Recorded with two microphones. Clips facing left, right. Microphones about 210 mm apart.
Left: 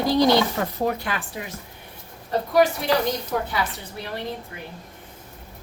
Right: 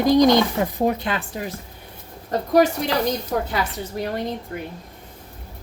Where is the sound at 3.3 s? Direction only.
40° right (ahead or behind).